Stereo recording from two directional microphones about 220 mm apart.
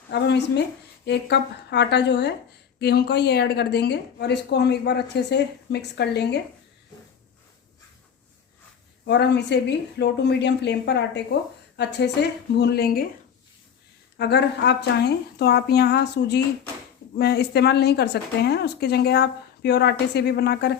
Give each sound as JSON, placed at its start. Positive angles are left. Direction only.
{"t": 0.1, "sound": "speech", "side_deg": 50}
{"t": 9.0, "sound": "speech", "side_deg": 50}
{"t": 14.2, "sound": "speech", "side_deg": 50}